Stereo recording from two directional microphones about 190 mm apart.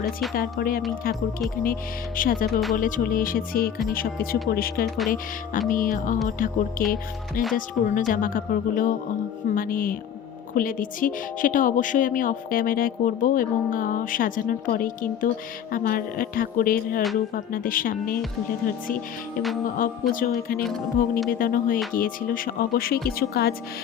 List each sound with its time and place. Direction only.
0.3 s a woman's voice: 50° left (ahead or behind)
19.8 s a woman's voice: 45° left (ahead or behind)
20.7 s speech: centre (ahead or behind)
21.2 s a woman's voice: 50° left (ahead or behind)